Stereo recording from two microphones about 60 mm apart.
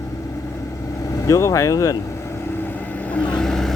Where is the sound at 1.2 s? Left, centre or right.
Left.